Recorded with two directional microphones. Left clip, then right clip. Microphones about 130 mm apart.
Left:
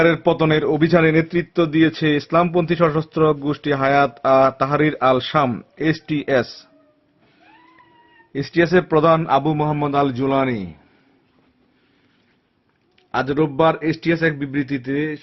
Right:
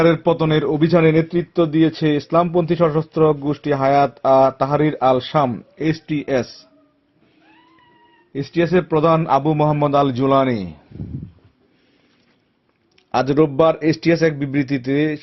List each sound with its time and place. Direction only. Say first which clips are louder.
0.0 s a man's voice: even; 20° left (ahead or behind)
8.3 s a man's voice: left 1 dB; 20° left (ahead or behind)
9.1 s a man's voice: right 1 dB; centre (ahead or behind)
9.8 s a man's voice: right 1 dB; 20° right (ahead or behind)
13.1 s a man's voice: right 4 dB; 25° right (ahead or behind)